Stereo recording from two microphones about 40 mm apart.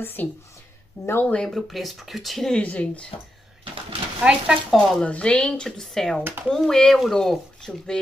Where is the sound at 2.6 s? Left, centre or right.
Left.